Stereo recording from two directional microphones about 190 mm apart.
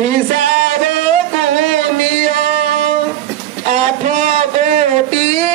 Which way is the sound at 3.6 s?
40° right (ahead or behind).